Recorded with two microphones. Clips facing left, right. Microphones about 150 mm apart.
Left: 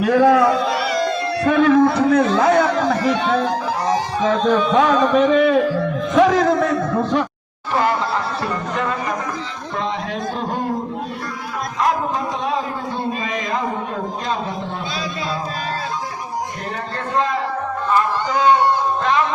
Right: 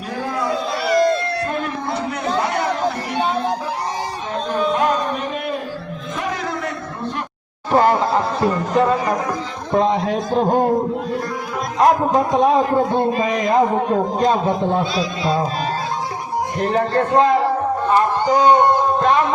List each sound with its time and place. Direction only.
0.0 s a man's voice: 80° left
1.5 s a sound: 90° left
7.7 s speech: 45° right (ahead or behind)
8.1 s speech: 20° right (ahead or behind)
8.7 s a man's voice: 35° right (ahead or behind)
9.7 s a man's voice: 45° right (ahead or behind)
11.8 s a man's voice: 45° right (ahead or behind)
16.7 s a man's voice: 45° right (ahead or behind)
17.9 s a sound: 40° right (ahead or behind)